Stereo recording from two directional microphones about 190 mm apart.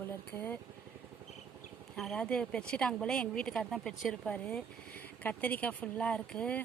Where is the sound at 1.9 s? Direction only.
5° left (ahead or behind).